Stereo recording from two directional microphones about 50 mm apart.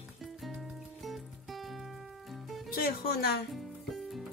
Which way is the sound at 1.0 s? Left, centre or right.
Centre.